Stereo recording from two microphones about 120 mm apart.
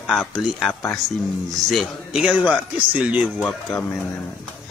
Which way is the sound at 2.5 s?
10° right (ahead or behind).